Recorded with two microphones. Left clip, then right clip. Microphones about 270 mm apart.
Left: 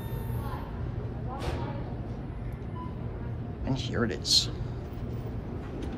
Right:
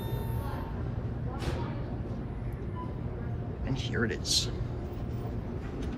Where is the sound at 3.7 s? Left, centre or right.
Centre.